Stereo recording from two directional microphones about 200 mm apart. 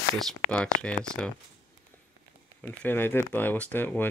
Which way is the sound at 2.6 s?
10° left (ahead or behind).